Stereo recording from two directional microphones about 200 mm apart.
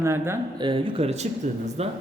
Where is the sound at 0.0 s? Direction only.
15° right (ahead or behind).